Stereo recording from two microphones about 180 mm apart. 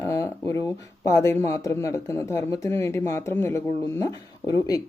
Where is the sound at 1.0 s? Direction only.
15° left (ahead or behind).